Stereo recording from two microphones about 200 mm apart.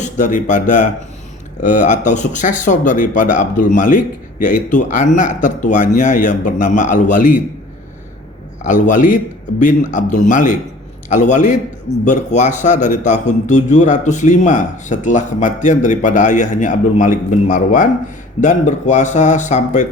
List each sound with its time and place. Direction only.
0.0 s a man's voice: 40° left (ahead or behind)
8.6 s a man's voice: 40° left (ahead or behind)